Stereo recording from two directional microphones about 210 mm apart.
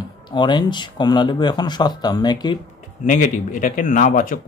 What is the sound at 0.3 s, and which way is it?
Speech, 20° left (ahead or behind).